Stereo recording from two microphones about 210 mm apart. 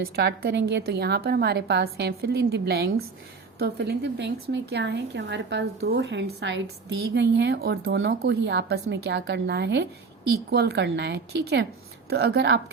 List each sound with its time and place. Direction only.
0.0 s a woman's voice: 50° right (ahead or behind)